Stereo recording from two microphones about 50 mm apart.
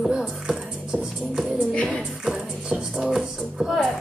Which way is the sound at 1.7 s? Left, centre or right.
Left.